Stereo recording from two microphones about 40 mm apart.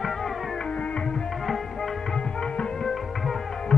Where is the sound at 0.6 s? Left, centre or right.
Left.